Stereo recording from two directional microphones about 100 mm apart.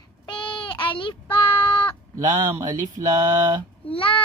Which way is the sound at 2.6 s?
35° right (ahead or behind).